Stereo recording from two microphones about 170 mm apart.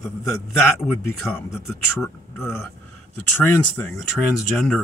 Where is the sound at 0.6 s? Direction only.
15° left (ahead or behind).